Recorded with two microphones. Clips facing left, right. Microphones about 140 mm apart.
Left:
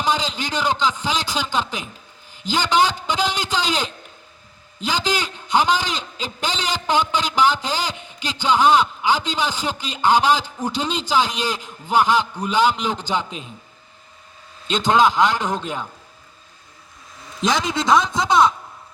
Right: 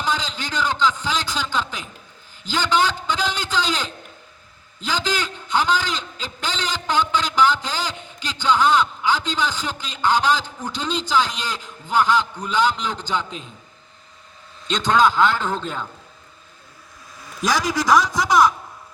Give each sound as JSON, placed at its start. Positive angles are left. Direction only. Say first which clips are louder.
{"t": 0.0, "sound": "a man's voice", "louder": "left 3 dB", "side_deg": 15}
{"t": 14.7, "sound": "a man's voice", "louder": "left 1 dB", "side_deg": 20}
{"t": 17.4, "sound": "a man's voice", "louder": "even", "side_deg": 25}